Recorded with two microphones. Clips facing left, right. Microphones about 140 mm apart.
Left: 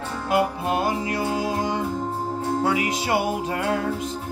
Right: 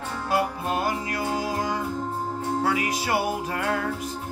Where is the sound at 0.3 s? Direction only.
25° left (ahead or behind).